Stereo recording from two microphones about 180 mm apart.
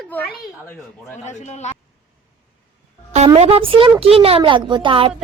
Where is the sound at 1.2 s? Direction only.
40° left (ahead or behind).